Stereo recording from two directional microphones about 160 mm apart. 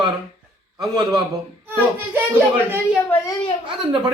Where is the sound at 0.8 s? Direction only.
25° right (ahead or behind).